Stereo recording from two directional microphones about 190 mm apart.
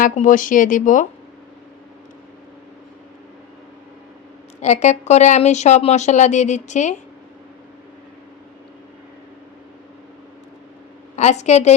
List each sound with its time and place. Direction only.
0.0 s speech: 45° left (ahead or behind)
4.6 s speech: 35° left (ahead or behind)
11.2 s speech: 35° left (ahead or behind)